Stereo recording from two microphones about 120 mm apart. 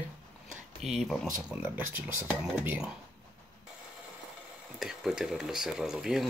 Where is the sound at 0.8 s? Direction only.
Centre (ahead or behind).